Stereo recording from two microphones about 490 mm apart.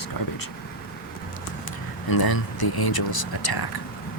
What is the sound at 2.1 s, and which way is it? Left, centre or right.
Speech, left.